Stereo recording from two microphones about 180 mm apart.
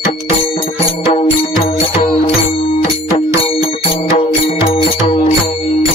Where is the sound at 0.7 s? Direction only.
35° left (ahead or behind).